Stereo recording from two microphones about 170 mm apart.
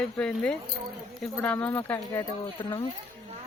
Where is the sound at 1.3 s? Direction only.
10° left (ahead or behind).